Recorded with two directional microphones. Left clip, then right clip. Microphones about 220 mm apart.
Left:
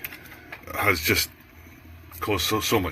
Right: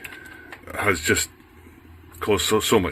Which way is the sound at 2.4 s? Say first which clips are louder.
Right 4 dB; 25° right (ahead or behind).